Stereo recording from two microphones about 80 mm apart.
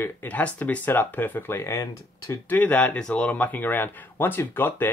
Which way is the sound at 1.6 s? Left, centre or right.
Left.